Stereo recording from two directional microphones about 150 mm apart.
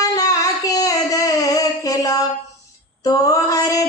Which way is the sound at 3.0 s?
25° left (ahead or behind).